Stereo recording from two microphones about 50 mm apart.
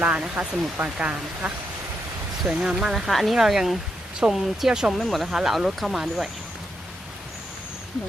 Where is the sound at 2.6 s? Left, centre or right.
Centre.